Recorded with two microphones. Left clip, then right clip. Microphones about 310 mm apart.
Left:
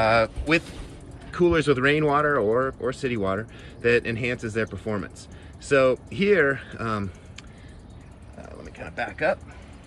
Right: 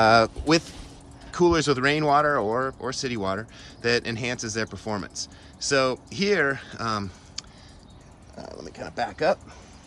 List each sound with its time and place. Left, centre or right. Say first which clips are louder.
0.0 s speech: right 2 dB; right
1.3 s speech: even; centre
8.7 s speech: right 1 dB; centre